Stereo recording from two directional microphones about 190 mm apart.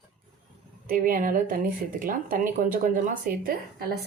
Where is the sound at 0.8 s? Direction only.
45° right (ahead or behind).